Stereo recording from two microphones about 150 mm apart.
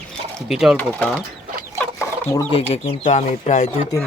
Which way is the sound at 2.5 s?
40° left (ahead or behind).